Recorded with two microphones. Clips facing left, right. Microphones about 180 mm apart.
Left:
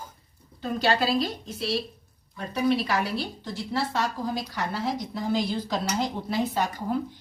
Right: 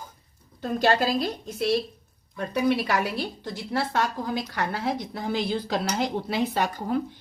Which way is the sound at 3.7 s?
55° right (ahead or behind).